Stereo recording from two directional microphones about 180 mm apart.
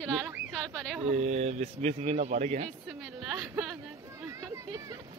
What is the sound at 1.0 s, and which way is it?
Speech, 35° right (ahead or behind).